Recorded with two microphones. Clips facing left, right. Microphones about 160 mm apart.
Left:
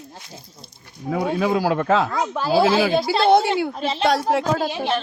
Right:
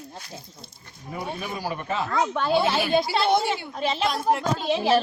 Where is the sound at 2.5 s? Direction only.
90° left.